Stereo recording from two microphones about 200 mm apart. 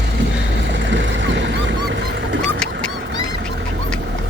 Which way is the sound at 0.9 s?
65° right (ahead or behind).